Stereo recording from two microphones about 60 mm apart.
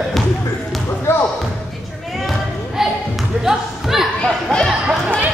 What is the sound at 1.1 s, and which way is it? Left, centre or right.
Basketball bounce, left.